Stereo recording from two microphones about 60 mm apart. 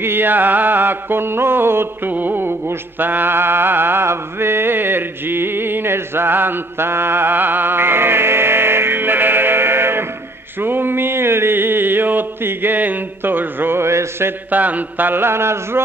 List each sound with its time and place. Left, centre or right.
0.0 s music: right
2.1 s a sound: right
14.5 s music: right